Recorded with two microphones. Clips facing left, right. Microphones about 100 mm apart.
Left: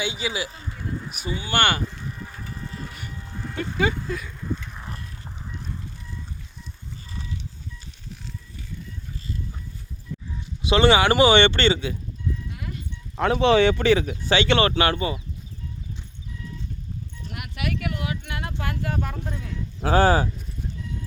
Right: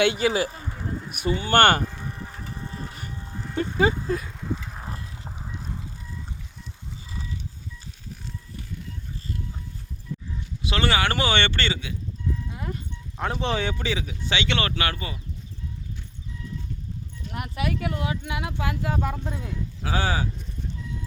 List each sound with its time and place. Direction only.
0.0 s speech: 55° right (ahead or behind)
2.1 s a sound: 25° right (ahead or behind)
3.8 s speech: 30° right (ahead or behind)
4.7 s mechanisms: 35° right (ahead or behind)
5.5 s fowl: 35° right (ahead or behind)
10.6 s speech: 20° left (ahead or behind)
12.5 s a sound: 30° right (ahead or behind)
13.1 s speech: 85° left; by 15.2 s 25° left (ahead or behind)
17.3 s speech: 30° right (ahead or behind)
18.3 s speech: 15° right (ahead or behind)
19.8 s speech: 45° left (ahead or behind)